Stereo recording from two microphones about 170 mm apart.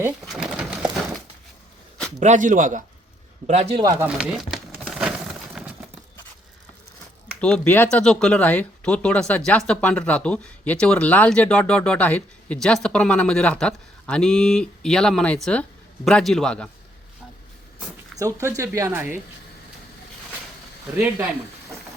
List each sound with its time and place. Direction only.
0.3 s a sound: 5° right (ahead or behind)
2.1 s a man's voice: 45° right (ahead or behind)
3.4 s a man's voice: 40° right (ahead or behind)
3.8 s speech: 20° right (ahead or behind)
4.0 s a sound: 5° right (ahead or behind)
5.6 s horse: centre (ahead or behind)
7.4 s speech: 5° left (ahead or behind)
18.2 s speech: 20° right (ahead or behind)